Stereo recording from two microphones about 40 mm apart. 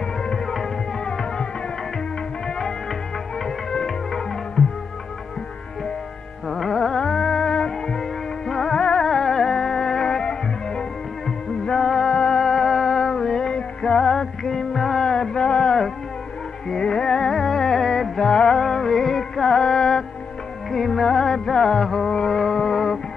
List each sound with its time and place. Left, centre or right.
1.0 s music: centre
3.4 s music: centre
6.5 s music: centre
9.1 s music: centre
11.6 s music: centre
12.4 s music: centre